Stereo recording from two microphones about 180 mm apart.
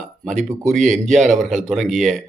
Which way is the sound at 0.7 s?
45° right (ahead or behind).